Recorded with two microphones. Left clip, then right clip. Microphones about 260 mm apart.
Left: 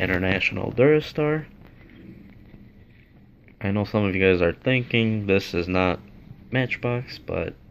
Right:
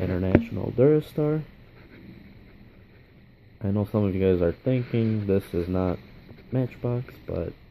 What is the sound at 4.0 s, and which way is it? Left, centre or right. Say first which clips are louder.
Speech: left 4 dB; centre.